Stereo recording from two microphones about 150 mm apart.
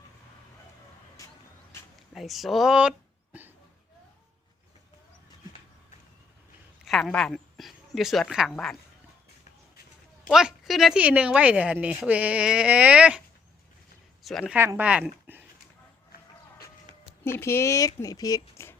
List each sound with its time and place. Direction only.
2.1 s speech: centre (ahead or behind)
6.8 s a sound: centre (ahead or behind)
7.1 s speech: 5° left (ahead or behind)
10.2 s speech: centre (ahead or behind)
14.3 s speech: centre (ahead or behind)
14.5 s speech: 15° right (ahead or behind)
17.3 s speech: 15° left (ahead or behind)